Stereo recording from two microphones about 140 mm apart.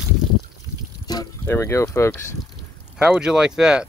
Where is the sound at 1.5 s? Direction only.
20° left (ahead or behind).